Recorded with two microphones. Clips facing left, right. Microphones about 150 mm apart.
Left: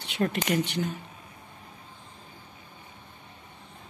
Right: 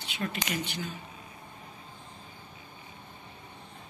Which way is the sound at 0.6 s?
65° left (ahead or behind).